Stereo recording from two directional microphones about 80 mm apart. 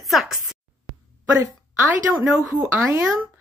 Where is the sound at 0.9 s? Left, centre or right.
Centre.